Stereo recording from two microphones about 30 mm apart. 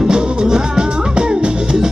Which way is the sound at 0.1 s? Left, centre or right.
Right.